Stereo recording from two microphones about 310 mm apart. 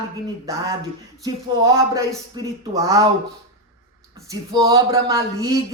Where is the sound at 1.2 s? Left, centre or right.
Centre.